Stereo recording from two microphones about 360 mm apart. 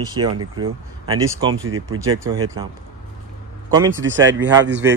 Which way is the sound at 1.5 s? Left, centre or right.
Right.